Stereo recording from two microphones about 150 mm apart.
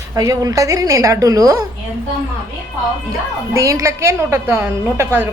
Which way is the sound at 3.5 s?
20° right (ahead or behind).